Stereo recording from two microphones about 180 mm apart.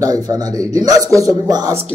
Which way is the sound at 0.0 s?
20° right (ahead or behind).